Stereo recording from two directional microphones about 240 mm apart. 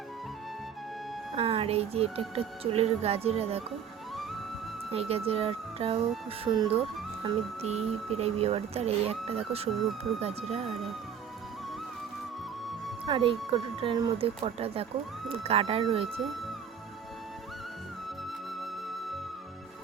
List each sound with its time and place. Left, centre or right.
1.4 s speech: right
4.9 s speech: right
13.1 s speech: right